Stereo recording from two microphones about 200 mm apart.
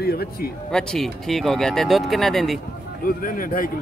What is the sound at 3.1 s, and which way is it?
Speech, 45° left (ahead or behind).